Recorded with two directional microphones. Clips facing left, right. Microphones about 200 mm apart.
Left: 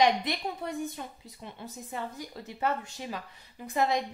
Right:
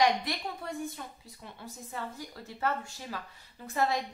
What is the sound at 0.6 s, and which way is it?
A woman's voice, 20° left (ahead or behind).